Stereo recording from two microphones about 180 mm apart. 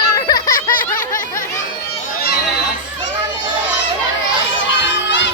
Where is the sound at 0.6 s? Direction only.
50° left (ahead or behind).